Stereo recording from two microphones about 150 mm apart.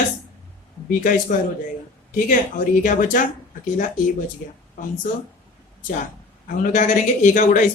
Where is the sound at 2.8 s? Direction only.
60° left (ahead or behind).